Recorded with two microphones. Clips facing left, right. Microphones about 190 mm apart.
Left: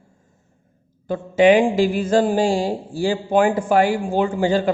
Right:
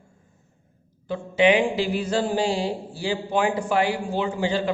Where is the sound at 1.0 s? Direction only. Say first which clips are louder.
Left 5 dB; 45° left (ahead or behind).